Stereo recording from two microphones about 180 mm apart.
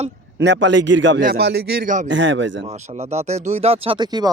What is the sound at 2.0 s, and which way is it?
Speech, 90° right.